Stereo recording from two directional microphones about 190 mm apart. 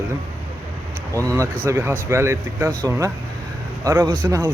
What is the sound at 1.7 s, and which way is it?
Speech, 15° right (ahead or behind).